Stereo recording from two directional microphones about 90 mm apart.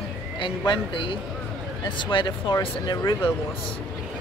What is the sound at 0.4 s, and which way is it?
Speech, 70° left (ahead or behind).